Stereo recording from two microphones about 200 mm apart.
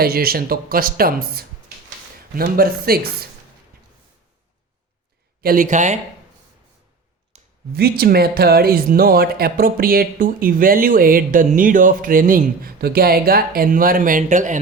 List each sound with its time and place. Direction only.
0.0 s speech: 50° right (ahead or behind)
5.4 s speech: 45° right (ahead or behind)
7.3 s a sound: 30° right (ahead or behind)
7.7 s speech: 50° right (ahead or behind)